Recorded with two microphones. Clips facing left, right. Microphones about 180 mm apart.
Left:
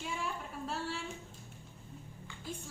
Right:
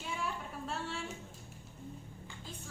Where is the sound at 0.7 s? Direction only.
Centre (ahead or behind).